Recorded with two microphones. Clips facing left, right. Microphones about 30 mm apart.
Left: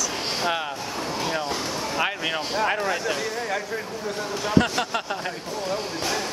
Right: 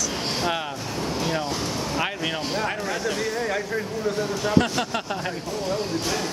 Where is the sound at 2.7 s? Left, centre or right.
Centre.